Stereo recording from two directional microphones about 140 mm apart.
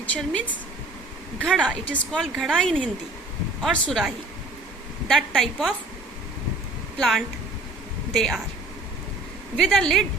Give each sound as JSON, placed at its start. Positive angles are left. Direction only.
{"t": 0.0, "sound": "a woman's voice", "side_deg": 10}
{"t": 1.6, "sound": "a woman's voice", "side_deg": 5}
{"t": 7.0, "sound": "a woman's voice", "side_deg": 0}
{"t": 9.6, "sound": "a woman's voice", "side_deg": 0}